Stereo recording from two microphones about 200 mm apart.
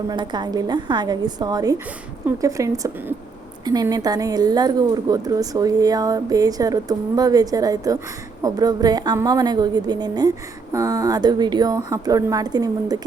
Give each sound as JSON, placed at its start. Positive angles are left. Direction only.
{"t": 0.1, "sound": "a woman's voice", "side_deg": -20}